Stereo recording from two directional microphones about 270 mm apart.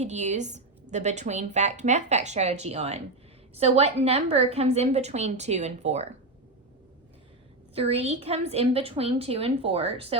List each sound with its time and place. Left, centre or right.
0.0 s a woman's voice: right
7.8 s a woman's voice: right